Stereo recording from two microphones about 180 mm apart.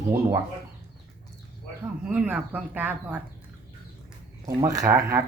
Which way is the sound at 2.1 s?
5° right (ahead or behind).